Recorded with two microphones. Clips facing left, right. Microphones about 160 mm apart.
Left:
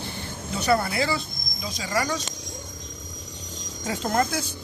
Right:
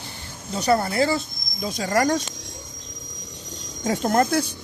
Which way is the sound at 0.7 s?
40° right (ahead or behind).